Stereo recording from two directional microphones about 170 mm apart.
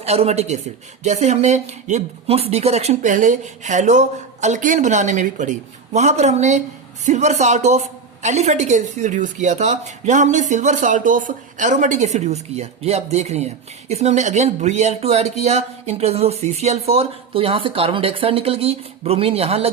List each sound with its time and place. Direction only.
0.0 s a woman's voice: 40° right (ahead or behind)